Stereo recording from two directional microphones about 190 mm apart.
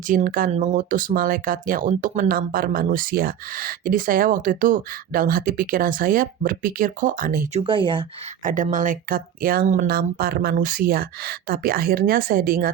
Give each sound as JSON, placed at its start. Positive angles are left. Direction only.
{"t": 0.1, "sound": "speech", "side_deg": -45}
{"t": 7.6, "sound": "speech", "side_deg": -25}
{"t": 8.4, "sound": "speech", "side_deg": -45}